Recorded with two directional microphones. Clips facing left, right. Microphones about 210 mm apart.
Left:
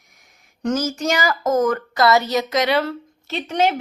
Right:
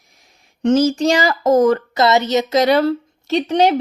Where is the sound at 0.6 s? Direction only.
30° right (ahead or behind).